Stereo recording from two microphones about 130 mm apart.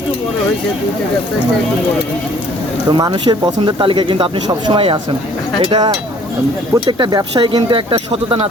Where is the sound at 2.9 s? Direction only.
35° right (ahead or behind).